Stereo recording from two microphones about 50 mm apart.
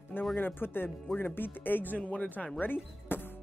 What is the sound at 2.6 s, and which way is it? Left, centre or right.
Music, left.